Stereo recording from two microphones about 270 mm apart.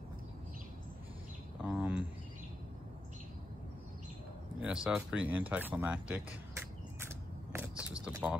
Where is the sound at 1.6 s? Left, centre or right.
Centre.